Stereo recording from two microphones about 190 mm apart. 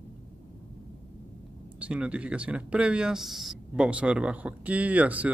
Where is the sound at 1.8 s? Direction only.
5° right (ahead or behind).